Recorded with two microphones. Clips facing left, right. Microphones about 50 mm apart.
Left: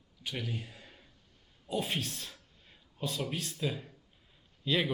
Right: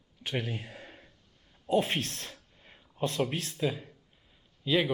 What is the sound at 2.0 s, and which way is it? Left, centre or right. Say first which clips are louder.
Speech: right 2 dB; right.